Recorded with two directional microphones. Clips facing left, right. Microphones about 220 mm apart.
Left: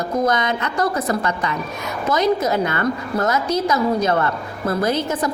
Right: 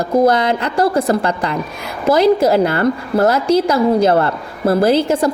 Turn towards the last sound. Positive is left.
turn(degrees=-30)  # may be behind; listen again after turning